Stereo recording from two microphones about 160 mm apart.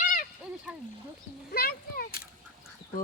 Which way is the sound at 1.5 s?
70° left (ahead or behind).